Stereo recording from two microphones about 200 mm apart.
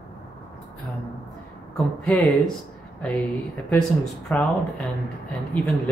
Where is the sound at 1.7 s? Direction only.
5° left (ahead or behind).